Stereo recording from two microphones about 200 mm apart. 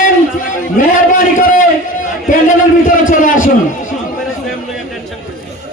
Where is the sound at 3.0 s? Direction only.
40° left (ahead or behind).